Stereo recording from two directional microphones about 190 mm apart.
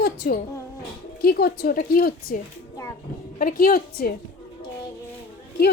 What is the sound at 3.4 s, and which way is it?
Speech, 50° left (ahead or behind).